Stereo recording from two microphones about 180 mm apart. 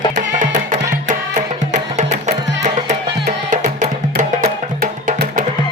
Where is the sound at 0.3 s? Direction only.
45° right (ahead or behind).